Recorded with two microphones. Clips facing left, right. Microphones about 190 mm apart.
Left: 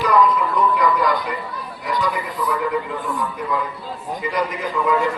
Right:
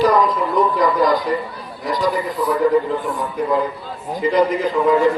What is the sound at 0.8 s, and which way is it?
A man's voice, 35° right (ahead or behind).